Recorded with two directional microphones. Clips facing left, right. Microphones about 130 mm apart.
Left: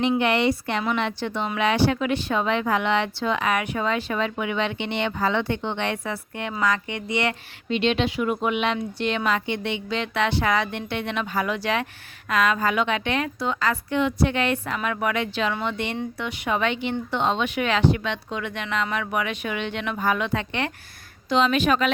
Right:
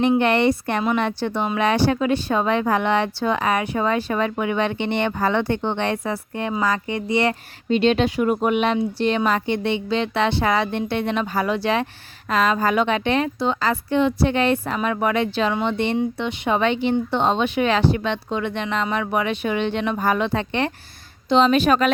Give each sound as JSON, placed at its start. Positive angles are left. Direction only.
{"t": 0.2, "sound": "a woman's voice", "side_deg": -50}